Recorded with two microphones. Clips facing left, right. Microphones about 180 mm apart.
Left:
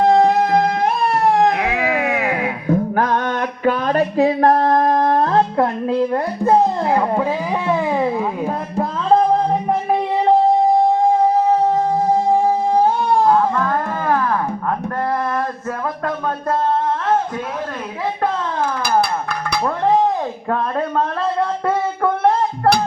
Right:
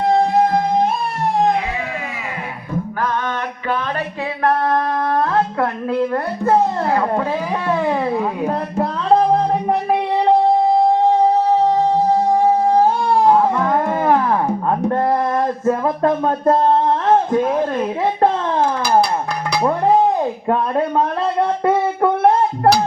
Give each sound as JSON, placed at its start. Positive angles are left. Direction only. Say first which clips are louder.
{"t": 0.1, "sound": "music", "louder": "left 1 dB", "side_deg": 75}
{"t": 5.5, "sound": "a child's voice", "louder": "left 2 dB", "side_deg": 20}
{"t": 7.7, "sound": "music", "louder": "even", "side_deg": 0}
{"t": 13.2, "sound": "music", "louder": "right 3 dB", "side_deg": -20}
{"t": 15.6, "sound": "speech", "louder": "right 7 dB", "side_deg": -25}